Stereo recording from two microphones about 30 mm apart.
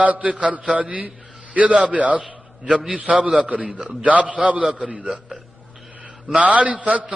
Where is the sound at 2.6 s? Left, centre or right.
Centre.